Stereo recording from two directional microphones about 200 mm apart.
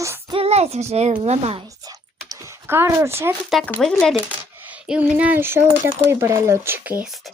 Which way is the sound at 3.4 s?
Centre (ahead or behind).